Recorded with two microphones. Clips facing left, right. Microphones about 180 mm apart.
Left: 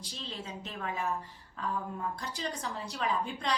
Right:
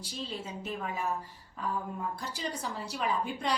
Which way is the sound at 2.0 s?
5° right (ahead or behind).